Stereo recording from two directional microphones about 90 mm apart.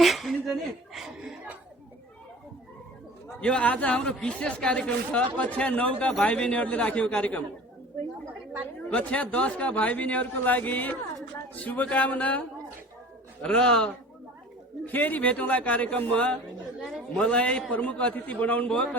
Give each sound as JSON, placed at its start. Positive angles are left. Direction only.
{"t": 0.0, "sound": "chuckle", "side_deg": 0}
{"t": 3.4, "sound": "speech", "side_deg": 15}
{"t": 8.9, "sound": "speech", "side_deg": 15}
{"t": 13.4, "sound": "speech", "side_deg": 10}
{"t": 14.8, "sound": "speech", "side_deg": 20}